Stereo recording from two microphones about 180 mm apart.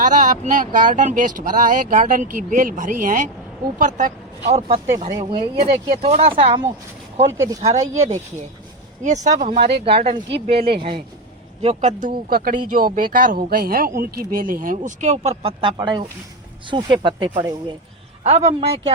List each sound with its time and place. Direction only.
0.0 s speech: 45° right (ahead or behind)
5.3 s speech: 30° right (ahead or behind)
7.3 s speech: 15° right (ahead or behind)
7.6 s speech: 40° right (ahead or behind)
18.2 s speech: 35° right (ahead or behind)